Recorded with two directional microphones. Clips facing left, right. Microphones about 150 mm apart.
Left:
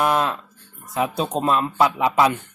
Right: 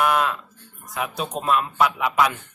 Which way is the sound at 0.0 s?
35° left (ahead or behind).